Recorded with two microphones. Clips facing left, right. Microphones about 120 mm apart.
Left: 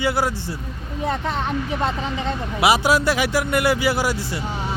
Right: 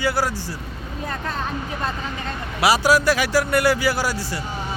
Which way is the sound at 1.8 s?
20° left (ahead or behind).